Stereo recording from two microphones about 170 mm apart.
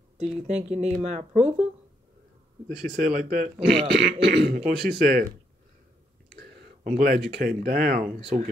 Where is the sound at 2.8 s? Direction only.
55° right (ahead or behind).